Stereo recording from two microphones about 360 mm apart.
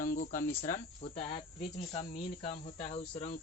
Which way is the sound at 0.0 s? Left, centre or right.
Left.